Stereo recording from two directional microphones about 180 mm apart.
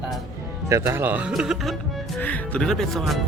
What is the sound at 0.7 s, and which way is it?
Speech, 15° right (ahead or behind).